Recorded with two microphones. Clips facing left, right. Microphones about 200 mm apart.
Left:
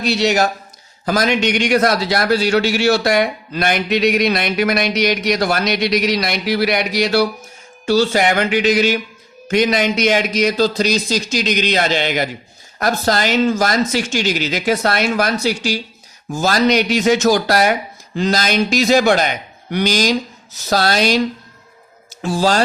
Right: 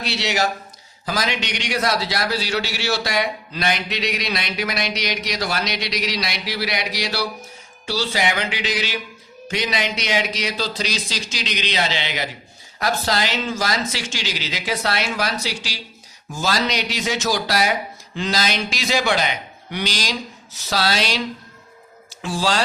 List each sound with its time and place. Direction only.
0.0 s a man's voice: 45° left (ahead or behind)